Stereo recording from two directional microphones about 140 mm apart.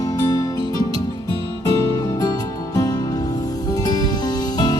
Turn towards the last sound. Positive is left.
turn(degrees=30)  # may be behind; listen again after turning